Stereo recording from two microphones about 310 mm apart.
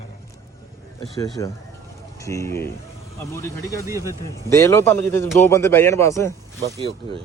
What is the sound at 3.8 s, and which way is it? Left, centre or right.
Speech, centre.